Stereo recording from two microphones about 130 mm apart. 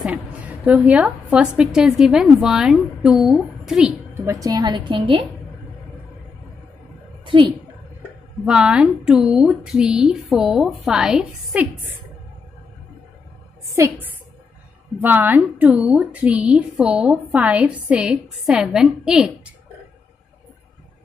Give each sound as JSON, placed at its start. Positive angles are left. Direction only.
{"t": 0.7, "sound": "a woman's voice", "side_deg": -10}
{"t": 4.3, "sound": "a woman's voice", "side_deg": -30}
{"t": 7.2, "sound": "a woman's voice", "side_deg": -40}
{"t": 8.5, "sound": "a woman's voice", "side_deg": -5}
{"t": 13.7, "sound": "a woman's voice", "side_deg": -25}